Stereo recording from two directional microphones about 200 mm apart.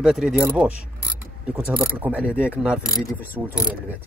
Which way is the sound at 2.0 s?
5° right (ahead or behind).